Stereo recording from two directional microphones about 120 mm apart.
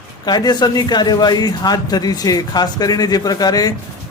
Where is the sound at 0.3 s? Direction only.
35° left (ahead or behind).